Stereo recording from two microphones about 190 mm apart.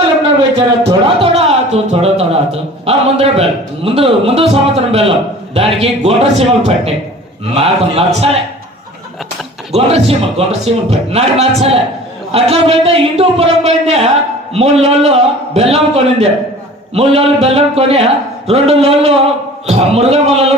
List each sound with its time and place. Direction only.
0.5 s music: 25° right (ahead or behind)
3.8 s a man's voice: 30° right (ahead or behind)
9.7 s a man's voice: 35° right (ahead or behind)